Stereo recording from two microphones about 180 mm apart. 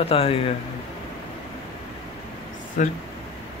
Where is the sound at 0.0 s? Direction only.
30° left (ahead or behind).